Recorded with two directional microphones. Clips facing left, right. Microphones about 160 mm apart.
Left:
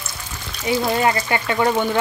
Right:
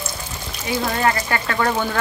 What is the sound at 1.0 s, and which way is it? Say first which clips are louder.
Speech: left 1 dB; 20° left (ahead or behind).